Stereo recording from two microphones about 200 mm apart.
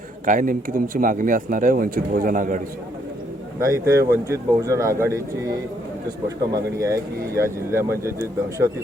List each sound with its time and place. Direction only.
0.3 s speech: 45° right (ahead or behind)
3.6 s speech: 15° right (ahead or behind)